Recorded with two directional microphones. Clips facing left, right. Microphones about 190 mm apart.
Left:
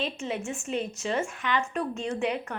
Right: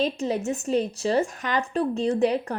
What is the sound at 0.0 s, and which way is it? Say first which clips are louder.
A woman's voice: right 7 dB; 40° right (ahead or behind).